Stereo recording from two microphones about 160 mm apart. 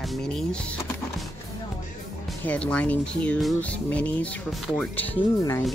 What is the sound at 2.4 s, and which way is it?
Speech, 10° left (ahead or behind).